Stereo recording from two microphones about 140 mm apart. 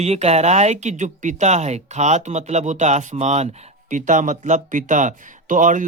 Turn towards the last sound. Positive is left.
turn(degrees=-65)  # may be behind; listen again after turning